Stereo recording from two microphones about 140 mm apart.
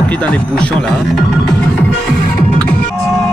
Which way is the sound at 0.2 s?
10° left (ahead or behind).